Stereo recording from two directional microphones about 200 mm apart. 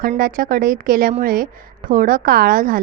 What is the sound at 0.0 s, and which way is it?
A woman's voice, 45° right (ahead or behind).